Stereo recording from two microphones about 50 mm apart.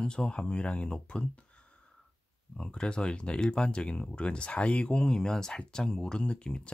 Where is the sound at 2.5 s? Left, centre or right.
Centre.